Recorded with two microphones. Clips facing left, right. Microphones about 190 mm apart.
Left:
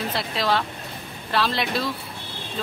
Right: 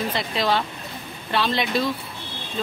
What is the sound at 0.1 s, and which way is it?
Speech, centre (ahead or behind).